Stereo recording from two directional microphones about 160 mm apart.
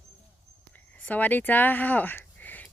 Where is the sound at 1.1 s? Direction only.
10° left (ahead or behind).